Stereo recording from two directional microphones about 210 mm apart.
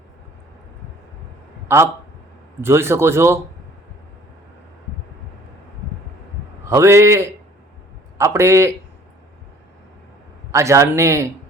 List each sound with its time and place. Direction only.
1.6 s a man's voice: 10° right (ahead or behind)
6.7 s a man's voice: 10° right (ahead or behind)
10.5 s a man's voice: 15° right (ahead or behind)